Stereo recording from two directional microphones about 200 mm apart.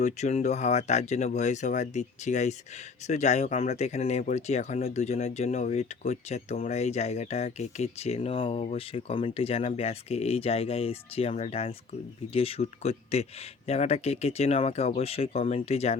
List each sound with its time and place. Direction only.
0.0 s speech: 35° left (ahead or behind)